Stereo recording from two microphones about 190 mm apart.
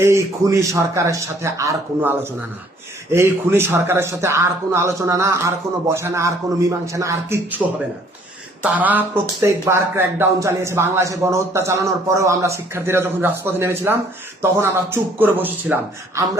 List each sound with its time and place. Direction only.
0.0 s speech: 15° right (ahead or behind)
8.6 s speech: 10° right (ahead or behind)